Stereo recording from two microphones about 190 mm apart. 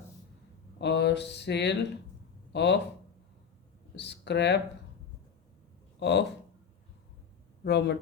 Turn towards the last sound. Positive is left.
turn(degrees=60)  # may be behind; listen again after turning